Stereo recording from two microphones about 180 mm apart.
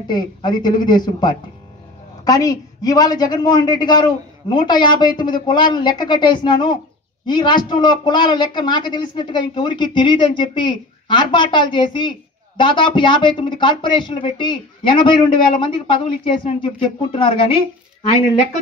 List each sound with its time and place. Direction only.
0.1 s a woman's voice: 25° left (ahead or behind)